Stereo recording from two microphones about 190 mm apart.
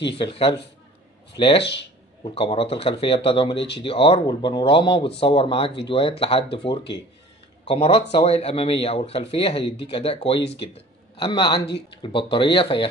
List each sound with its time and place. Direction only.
0.2 s speech: 30° left (ahead or behind)
1.6 s speech: 65° left (ahead or behind)
2.2 s speech: 30° left (ahead or behind)
10.4 s speech: 65° left (ahead or behind)
10.7 s a man's voice: 25° left (ahead or behind)